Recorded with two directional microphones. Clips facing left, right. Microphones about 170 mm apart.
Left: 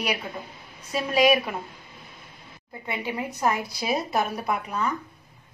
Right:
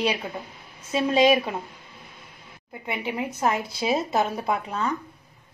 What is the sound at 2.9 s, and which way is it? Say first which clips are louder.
A woman's voice: right 1 dB; 20° right (ahead or behind).